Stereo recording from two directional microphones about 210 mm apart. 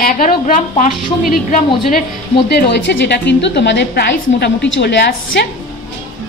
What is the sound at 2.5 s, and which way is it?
A woman's voice, 50° left (ahead or behind).